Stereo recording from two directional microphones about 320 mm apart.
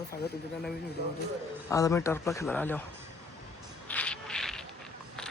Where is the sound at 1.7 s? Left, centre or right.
Centre.